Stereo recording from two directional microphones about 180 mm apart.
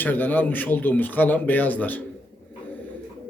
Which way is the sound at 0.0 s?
10° left (ahead or behind).